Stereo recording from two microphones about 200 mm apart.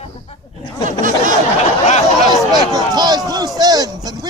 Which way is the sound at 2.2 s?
20° right (ahead or behind).